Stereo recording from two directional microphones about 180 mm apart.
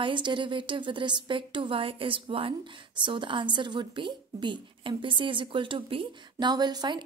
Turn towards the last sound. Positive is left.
turn(degrees=-25)  # may be behind; listen again after turning